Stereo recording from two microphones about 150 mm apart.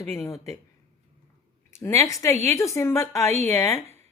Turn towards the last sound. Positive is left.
turn(degrees=20)  # may be behind; listen again after turning